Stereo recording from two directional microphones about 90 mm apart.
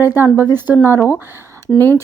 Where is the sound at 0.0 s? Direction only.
25° right (ahead or behind).